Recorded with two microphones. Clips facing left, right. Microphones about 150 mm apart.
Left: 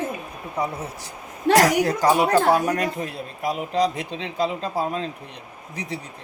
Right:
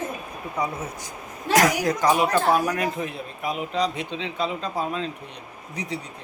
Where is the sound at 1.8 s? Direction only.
30° left (ahead or behind).